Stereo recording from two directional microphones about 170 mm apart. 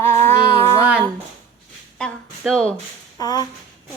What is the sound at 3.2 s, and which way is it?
Speech, 25° left (ahead or behind).